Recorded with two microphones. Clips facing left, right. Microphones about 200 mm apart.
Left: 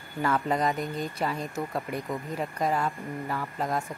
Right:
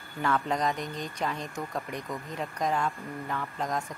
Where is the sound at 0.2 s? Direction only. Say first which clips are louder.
Left 2 dB; 5° left (ahead or behind).